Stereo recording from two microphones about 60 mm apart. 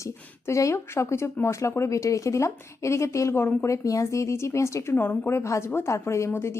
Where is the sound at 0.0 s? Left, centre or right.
Left.